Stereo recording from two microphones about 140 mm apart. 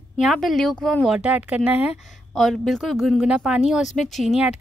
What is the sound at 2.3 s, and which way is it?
A woman's voice, centre (ahead or behind).